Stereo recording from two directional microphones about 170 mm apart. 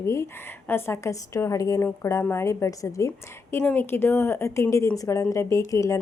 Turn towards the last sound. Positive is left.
turn(degrees=20)  # may be behind; listen again after turning